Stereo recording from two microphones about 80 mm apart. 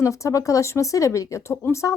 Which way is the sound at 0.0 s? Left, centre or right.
Left.